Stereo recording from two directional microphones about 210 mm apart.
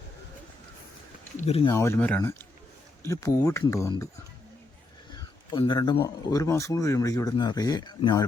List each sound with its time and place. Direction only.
1.4 s speech: 30° left (ahead or behind)
1.7 s speech: 10° left (ahead or behind)
5.1 s speech: 20° left (ahead or behind)